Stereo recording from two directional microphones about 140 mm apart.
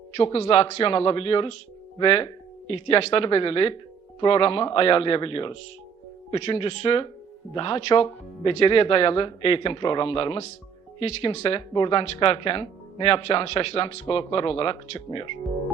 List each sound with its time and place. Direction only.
0.2 s speech: 35° left (ahead or behind)